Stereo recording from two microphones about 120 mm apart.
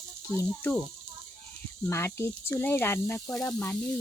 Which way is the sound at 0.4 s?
15° left (ahead or behind).